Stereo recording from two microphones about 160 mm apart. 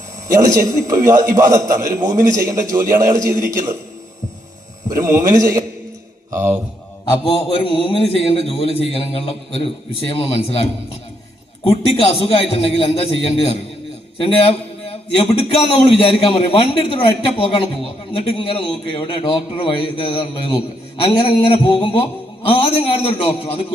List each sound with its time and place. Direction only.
0.3 s a man's voice: 20° right (ahead or behind)
4.9 s a man's voice: 20° right (ahead or behind)
6.3 s mantra: 15° right (ahead or behind)
7.3 s a man's voice: 35° left (ahead or behind)